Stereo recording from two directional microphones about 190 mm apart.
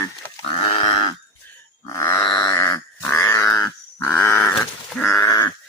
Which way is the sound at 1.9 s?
15° left (ahead or behind).